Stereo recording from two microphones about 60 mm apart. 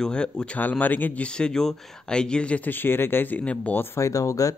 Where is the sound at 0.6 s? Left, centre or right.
Left.